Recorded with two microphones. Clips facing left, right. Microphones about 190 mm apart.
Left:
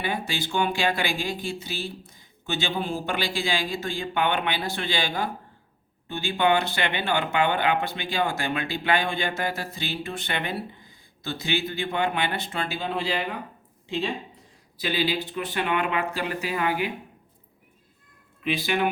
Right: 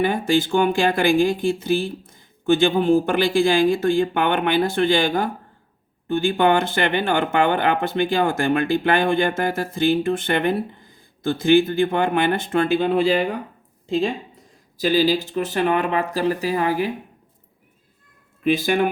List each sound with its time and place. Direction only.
0.0 s speech: 50° right (ahead or behind)
18.4 s speech: 45° right (ahead or behind)